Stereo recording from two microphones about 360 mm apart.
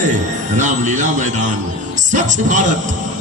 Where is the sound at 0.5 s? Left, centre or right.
Centre.